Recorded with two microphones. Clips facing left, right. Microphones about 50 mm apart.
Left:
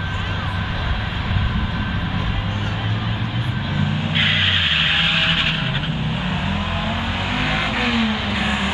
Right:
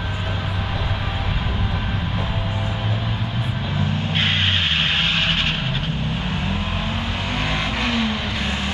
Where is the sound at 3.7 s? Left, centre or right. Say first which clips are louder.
Left 2 dB; centre.